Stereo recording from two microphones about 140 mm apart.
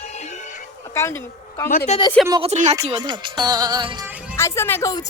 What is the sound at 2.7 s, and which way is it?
Speech, 30° right (ahead or behind).